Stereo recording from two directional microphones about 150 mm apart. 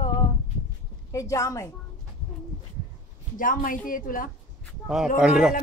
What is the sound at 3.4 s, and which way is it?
Speech, 65° left (ahead or behind).